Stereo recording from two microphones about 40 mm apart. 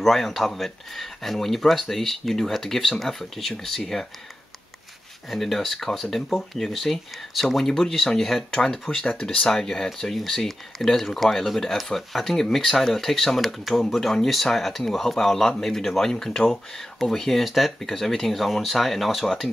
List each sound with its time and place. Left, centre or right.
0.0 s speech: centre
5.3 s speech: centre
17.5 s speech: centre